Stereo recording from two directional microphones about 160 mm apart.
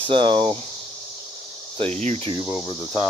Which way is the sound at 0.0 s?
30° right (ahead or behind).